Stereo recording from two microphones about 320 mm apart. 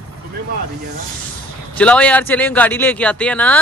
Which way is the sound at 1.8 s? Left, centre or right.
Centre.